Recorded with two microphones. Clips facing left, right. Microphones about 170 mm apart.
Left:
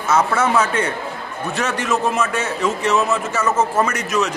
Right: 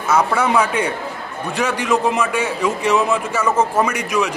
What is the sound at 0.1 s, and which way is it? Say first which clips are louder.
A man's voice: right 1 dB; 15° right (ahead or behind).